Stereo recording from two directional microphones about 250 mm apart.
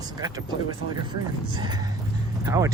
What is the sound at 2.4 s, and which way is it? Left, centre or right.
Speech, centre.